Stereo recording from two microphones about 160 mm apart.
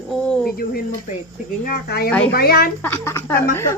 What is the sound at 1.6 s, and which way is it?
Speech, 70° left (ahead or behind).